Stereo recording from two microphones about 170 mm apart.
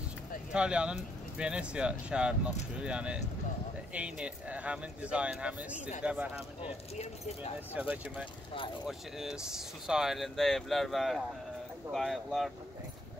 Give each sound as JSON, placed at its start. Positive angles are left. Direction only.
{"t": 0.5, "sound": "speech", "side_deg": -5}
{"t": 7.0, "sound": "speech", "side_deg": 40}
{"t": 7.7, "sound": "speech", "side_deg": -10}